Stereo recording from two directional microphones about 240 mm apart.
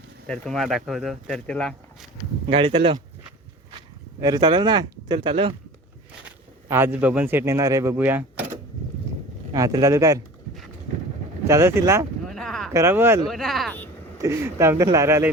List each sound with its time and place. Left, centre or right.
0.3 s speech: centre
2.5 s speech: right
6.2 s speech: centre
9.5 s speech: centre
11.4 s speech: centre
12.3 s a sound: centre
12.7 s speech: centre
14.2 s speech: centre